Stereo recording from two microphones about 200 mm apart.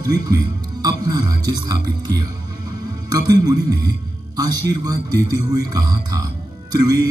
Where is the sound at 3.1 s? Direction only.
20° right (ahead or behind).